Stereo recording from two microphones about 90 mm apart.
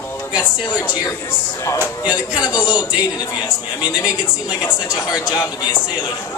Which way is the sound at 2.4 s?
55° left (ahead or behind).